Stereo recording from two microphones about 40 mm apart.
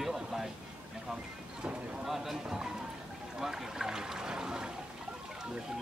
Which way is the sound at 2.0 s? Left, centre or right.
Centre.